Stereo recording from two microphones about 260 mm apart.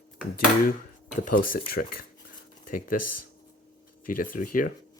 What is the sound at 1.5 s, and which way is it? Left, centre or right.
Speech, left.